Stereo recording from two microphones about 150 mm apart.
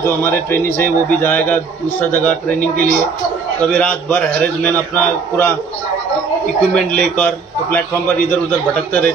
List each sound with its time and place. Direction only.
0.0 s a man's voice: 15° left (ahead or behind)
6.7 s a man's voice: 10° left (ahead or behind)
8.3 s a man's voice: 10° left (ahead or behind)